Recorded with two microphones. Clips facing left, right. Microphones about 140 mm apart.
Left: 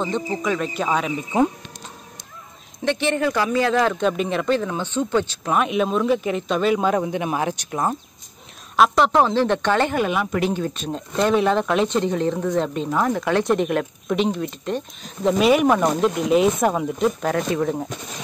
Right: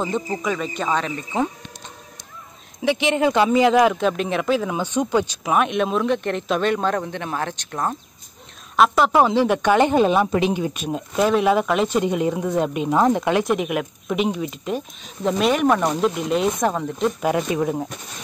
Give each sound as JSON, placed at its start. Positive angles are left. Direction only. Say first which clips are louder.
{"t": 0.0, "sound": "speech", "louder": "even", "side_deg": -5}
{"t": 2.8, "sound": "a woman's voice", "louder": "right 2 dB", "side_deg": -10}
{"t": 4.0, "sound": "speech", "louder": "even", "side_deg": 0}
{"t": 8.7, "sound": "a woman's voice", "louder": "even", "side_deg": 0}
{"t": 10.4, "sound": "a woman's voice", "louder": "right 1 dB", "side_deg": -15}
{"t": 12.9, "sound": "speech", "louder": "right 3 dB", "side_deg": -20}
{"t": 13.4, "sound": "speech", "louder": "left 2 dB", "side_deg": -5}
{"t": 17.2, "sound": "a woman's voice", "louder": "right 1 dB", "side_deg": -10}